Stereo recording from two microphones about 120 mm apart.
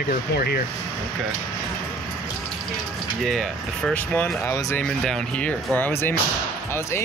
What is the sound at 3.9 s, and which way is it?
Speech, 15° left (ahead or behind).